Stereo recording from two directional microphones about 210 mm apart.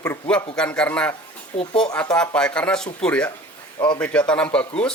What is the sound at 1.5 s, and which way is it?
Speech, 25° left (ahead or behind).